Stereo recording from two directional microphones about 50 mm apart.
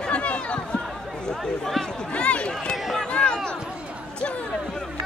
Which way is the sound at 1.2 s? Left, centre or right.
Centre.